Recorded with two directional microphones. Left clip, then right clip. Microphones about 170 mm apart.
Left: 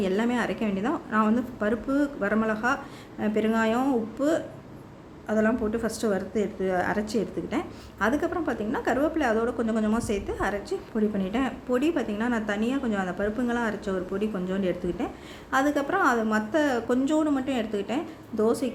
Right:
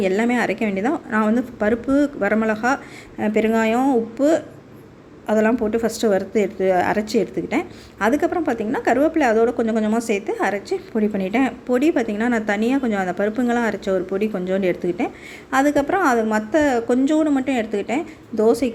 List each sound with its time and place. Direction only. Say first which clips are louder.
0.0 s a woman's voice: right 7 dB; 25° right (ahead or behind)